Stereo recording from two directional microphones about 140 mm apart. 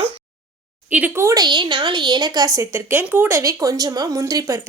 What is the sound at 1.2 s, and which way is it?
Speech, 30° right (ahead or behind).